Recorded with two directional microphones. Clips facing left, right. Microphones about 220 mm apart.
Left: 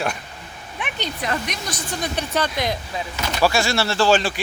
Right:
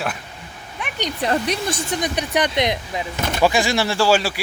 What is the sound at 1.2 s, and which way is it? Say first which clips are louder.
Speech: right 7 dB; 35° right (ahead or behind).